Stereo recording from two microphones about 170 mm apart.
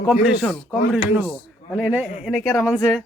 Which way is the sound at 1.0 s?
30° left (ahead or behind).